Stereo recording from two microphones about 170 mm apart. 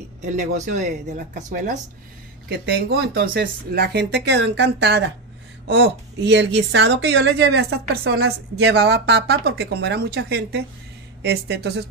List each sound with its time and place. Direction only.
0.2 s speech: 50° right (ahead or behind)
2.6 s a woman's voice: 70° right (ahead or behind)
11.2 s a woman's voice: 85° right